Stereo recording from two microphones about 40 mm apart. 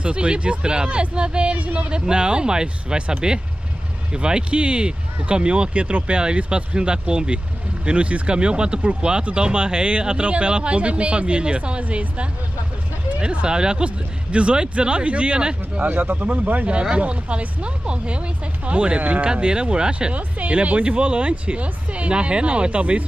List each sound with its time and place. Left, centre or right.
0.0 s speech: right
1.9 s speech: right
15.9 s speech: right
16.9 s speech: right
19.2 s speech: right